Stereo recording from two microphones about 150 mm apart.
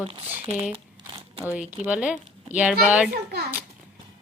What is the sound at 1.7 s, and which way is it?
A woman's voice, 10° right (ahead or behind).